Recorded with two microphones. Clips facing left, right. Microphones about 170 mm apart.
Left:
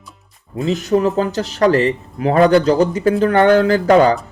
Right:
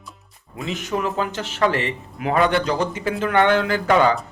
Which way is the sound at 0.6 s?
40° left (ahead or behind).